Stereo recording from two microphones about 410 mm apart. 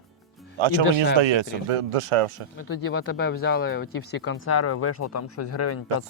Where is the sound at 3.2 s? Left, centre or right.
Left.